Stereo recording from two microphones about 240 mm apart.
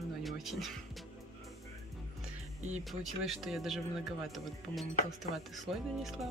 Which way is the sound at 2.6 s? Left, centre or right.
Right.